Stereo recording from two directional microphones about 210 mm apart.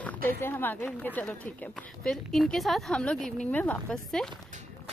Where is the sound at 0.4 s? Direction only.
10° left (ahead or behind).